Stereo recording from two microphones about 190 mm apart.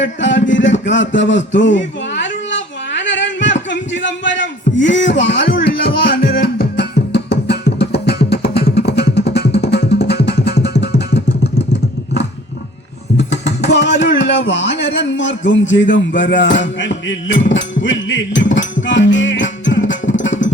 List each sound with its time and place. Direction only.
0.0 s a sound: 75° left (ahead or behind)
8.5 s music: 60° left (ahead or behind)
13.1 s speech: 65° left (ahead or behind)
16.4 s music: 70° left (ahead or behind)